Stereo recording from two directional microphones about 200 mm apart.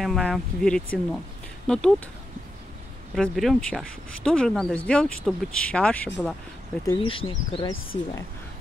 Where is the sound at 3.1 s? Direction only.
Centre (ahead or behind).